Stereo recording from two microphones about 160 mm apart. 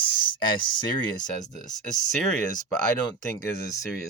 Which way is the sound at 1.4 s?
50° left (ahead or behind).